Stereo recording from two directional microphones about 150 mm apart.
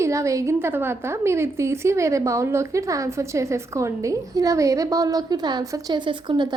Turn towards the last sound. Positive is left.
turn(degrees=-30)  # may be behind; listen again after turning